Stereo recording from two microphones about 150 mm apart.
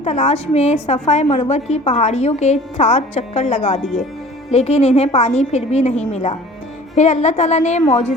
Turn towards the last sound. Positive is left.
turn(degrees=50)  # may be behind; listen again after turning